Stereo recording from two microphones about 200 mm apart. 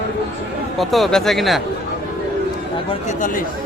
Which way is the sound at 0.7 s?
Centre (ahead or behind).